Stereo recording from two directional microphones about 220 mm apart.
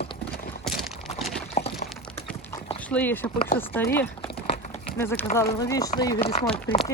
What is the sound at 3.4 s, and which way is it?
Speech, 40° left (ahead or behind).